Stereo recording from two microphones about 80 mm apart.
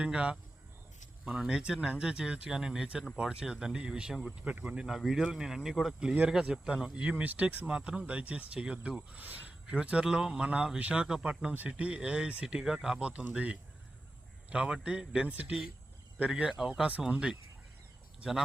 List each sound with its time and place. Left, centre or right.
0.0 s speech: centre
17.1 s speech: centre